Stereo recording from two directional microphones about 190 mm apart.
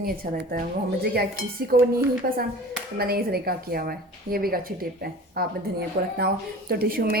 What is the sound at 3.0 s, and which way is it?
A woman's voice, 55° right (ahead or behind).